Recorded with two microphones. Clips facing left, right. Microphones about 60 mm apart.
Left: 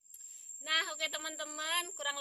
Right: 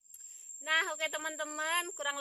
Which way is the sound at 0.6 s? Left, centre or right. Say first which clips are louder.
Right 4 dB; right.